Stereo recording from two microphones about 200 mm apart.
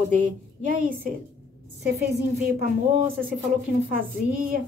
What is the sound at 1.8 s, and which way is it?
A woman's voice, 50° right (ahead or behind).